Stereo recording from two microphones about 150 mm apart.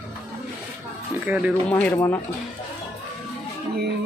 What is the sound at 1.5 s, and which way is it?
Speech, 10° left (ahead or behind).